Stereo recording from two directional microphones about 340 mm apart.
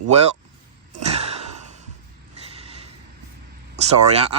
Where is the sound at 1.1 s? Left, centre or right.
Centre.